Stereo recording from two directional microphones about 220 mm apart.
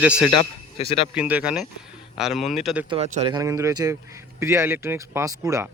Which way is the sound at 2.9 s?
30° right (ahead or behind).